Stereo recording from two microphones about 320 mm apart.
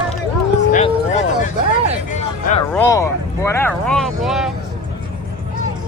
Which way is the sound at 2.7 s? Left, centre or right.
Centre.